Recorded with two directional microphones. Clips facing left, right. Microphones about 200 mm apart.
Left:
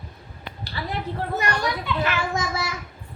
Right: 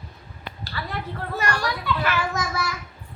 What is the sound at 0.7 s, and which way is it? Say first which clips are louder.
A child's voice: left 3 dB; 20° left (ahead or behind).